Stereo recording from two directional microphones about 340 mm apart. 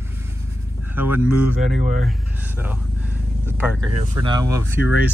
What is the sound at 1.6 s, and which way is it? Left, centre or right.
Speech, right.